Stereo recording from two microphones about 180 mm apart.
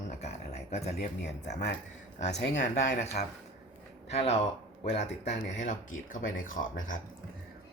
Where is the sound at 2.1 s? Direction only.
40° left (ahead or behind).